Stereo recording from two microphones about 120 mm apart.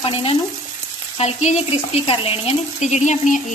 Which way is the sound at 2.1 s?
50° left (ahead or behind).